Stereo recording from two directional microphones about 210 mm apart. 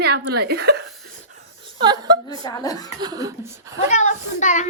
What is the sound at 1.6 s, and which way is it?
Chuckle, 20° right (ahead or behind).